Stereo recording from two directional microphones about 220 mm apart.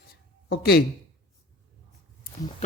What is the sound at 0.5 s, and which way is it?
Speech, 45° left (ahead or behind).